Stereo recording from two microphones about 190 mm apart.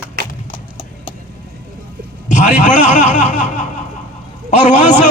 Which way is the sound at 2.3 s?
40° left (ahead or behind).